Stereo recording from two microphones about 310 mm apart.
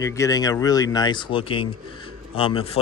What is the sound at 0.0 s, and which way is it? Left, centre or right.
Speech, centre.